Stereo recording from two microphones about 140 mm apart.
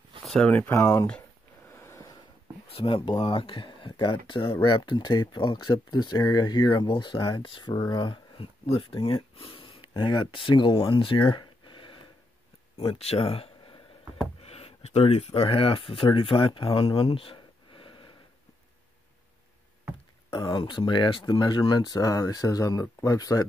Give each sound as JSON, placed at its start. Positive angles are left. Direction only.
{"t": 0.2, "sound": "speech", "side_deg": 5}
{"t": 1.8, "sound": "a sound", "side_deg": 20}
{"t": 2.7, "sound": "speech", "side_deg": 40}
{"t": 20.2, "sound": "speech", "side_deg": 30}